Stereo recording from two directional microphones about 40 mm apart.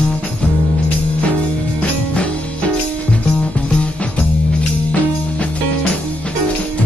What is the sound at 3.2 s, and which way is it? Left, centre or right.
Music, left.